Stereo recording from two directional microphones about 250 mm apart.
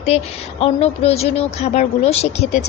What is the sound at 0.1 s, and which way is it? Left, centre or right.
A woman's voice, left.